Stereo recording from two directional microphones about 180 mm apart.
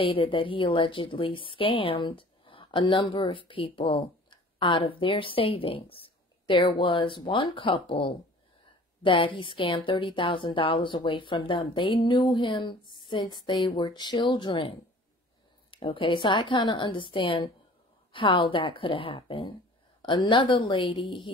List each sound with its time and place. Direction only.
0.0 s speech: 30° left (ahead or behind)